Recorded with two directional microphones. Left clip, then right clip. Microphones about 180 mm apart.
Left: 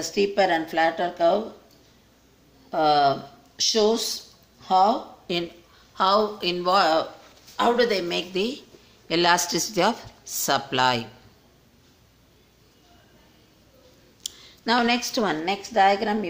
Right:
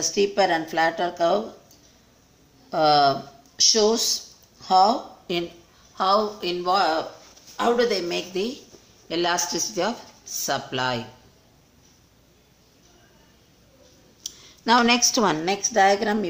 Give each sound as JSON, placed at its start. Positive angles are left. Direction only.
{"t": 0.0, "sound": "speech", "side_deg": 0}
{"t": 2.7, "sound": "speech", "side_deg": -10}
{"t": 7.5, "sound": "speech", "side_deg": 5}
{"t": 14.2, "sound": "a sound", "side_deg": 10}
{"t": 14.6, "sound": "a woman's voice", "side_deg": -10}